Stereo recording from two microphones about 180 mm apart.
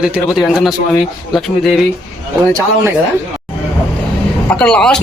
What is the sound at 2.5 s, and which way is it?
Speech, 15° right (ahead or behind).